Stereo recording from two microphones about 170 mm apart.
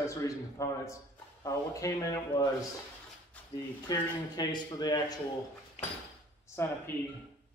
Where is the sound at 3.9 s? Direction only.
25° left (ahead or behind).